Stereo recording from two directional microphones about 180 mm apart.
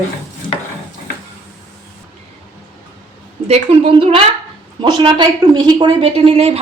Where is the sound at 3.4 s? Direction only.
35° right (ahead or behind).